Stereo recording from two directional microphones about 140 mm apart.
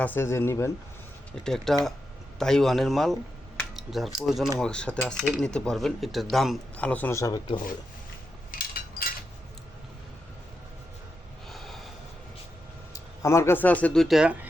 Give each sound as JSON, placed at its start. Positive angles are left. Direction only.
{"t": 0.0, "sound": "speech", "side_deg": 15}
{"t": 1.5, "sound": "speech", "side_deg": 0}
{"t": 8.5, "sound": "a sound", "side_deg": 90}
{"t": 11.4, "sound": "snort", "side_deg": 0}
{"t": 12.9, "sound": "speech", "side_deg": 20}